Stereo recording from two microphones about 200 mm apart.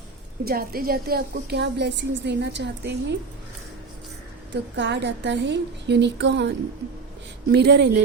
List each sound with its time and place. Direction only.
0.4 s a woman's voice: 45° right (ahead or behind)
4.8 s a woman's voice: 60° right (ahead or behind)
7.5 s a woman's voice: 55° right (ahead or behind)